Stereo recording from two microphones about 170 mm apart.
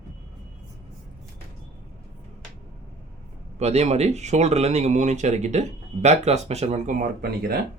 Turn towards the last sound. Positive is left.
turn(degrees=-65)  # may be behind; listen again after turning